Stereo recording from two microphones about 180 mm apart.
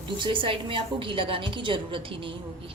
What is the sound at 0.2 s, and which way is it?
A woman's voice, 30° right (ahead or behind).